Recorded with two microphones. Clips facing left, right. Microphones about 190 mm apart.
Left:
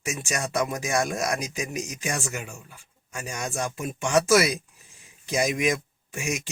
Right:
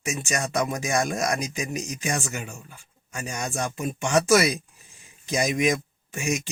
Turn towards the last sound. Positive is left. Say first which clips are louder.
# right 1 dB
turn(degrees=5)  # may be behind; listen again after turning